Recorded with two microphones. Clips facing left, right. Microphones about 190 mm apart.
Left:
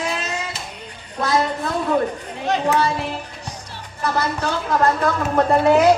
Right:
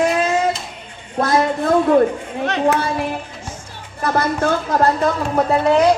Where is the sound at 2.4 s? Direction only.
65° right (ahead or behind).